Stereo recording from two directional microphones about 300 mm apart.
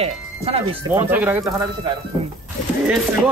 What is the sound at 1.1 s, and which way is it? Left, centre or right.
Speech, centre.